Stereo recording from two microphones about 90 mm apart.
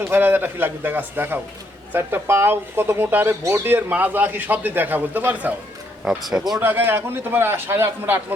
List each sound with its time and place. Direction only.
0.1 s a man's voice: 25° right (ahead or behind)
6.1 s speech: 5° right (ahead or behind)
6.6 s a man's voice: 20° right (ahead or behind)